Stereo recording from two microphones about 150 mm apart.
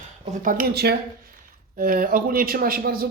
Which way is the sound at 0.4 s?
75° right (ahead or behind).